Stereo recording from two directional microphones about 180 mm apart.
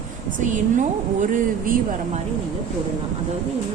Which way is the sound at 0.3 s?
45° right (ahead or behind).